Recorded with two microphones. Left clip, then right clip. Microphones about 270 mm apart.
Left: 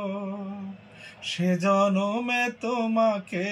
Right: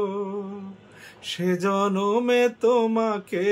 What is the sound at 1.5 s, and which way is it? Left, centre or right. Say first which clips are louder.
Mantra: left 1 dB; centre.